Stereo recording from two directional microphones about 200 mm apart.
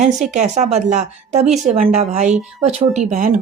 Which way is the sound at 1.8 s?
35° right (ahead or behind).